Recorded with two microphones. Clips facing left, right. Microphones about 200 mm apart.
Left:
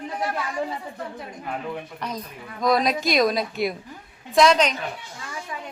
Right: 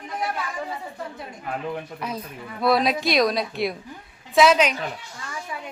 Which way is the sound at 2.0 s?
10° right (ahead or behind).